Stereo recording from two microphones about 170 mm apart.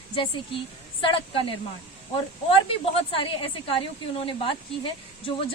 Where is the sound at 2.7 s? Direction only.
30° left (ahead or behind).